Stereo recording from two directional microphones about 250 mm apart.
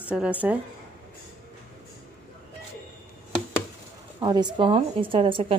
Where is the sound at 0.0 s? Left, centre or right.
Centre.